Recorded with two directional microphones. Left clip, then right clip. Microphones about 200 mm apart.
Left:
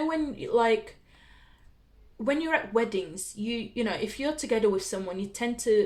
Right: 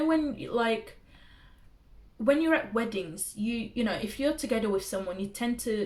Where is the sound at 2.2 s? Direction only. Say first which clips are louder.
Right 2 dB; 40° left (ahead or behind).